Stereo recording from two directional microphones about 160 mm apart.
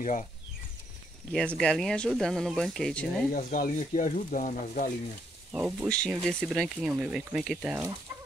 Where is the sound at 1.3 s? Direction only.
5° left (ahead or behind).